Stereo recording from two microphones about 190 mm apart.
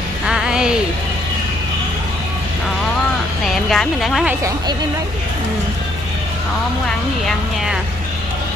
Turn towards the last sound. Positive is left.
turn(degrees=0)  # may be behind; listen again after turning